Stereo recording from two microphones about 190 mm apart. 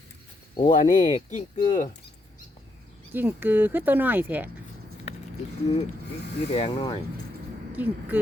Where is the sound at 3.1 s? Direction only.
10° right (ahead or behind).